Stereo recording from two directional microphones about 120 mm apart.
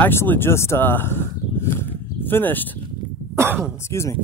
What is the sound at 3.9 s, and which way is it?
Speech, 25° left (ahead or behind).